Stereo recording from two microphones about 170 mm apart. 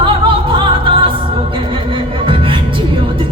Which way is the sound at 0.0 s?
30° right (ahead or behind).